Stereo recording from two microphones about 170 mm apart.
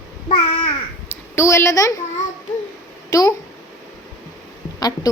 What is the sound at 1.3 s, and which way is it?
Speech, 15° left (ahead or behind).